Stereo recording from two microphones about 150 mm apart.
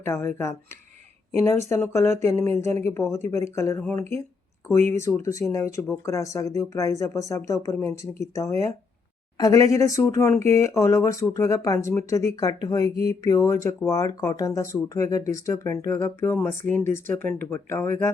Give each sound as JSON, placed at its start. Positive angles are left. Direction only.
{"t": 0.0, "sound": "speech", "side_deg": 15}
{"t": 4.9, "sound": "speech", "side_deg": 20}